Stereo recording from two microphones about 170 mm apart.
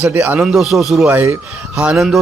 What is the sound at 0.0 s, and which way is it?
A man's voice, 10° right (ahead or behind).